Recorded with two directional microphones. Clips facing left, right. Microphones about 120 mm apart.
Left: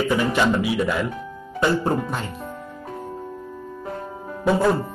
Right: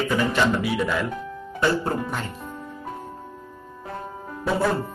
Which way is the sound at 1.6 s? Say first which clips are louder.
Left 2 dB; 20° left (ahead or behind).